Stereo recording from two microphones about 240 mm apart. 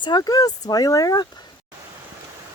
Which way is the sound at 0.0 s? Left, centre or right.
Centre.